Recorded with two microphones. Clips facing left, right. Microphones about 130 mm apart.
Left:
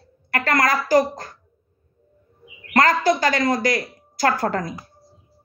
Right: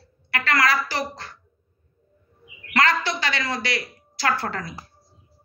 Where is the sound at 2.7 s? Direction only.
45° left (ahead or behind).